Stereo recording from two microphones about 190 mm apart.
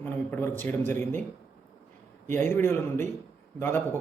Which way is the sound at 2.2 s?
10° left (ahead or behind).